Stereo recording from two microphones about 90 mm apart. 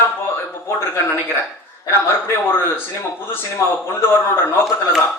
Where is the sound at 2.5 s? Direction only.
25° left (ahead or behind).